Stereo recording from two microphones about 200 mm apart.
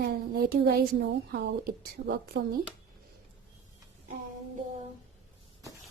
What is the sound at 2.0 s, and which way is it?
Speech, 60° right (ahead or behind).